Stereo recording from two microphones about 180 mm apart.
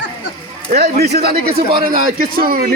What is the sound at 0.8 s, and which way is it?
Speech, 60° right (ahead or behind).